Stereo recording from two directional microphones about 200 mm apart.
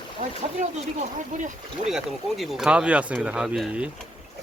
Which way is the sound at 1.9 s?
Centre (ahead or behind).